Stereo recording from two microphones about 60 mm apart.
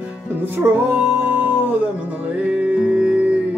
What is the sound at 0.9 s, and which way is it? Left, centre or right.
Music, right.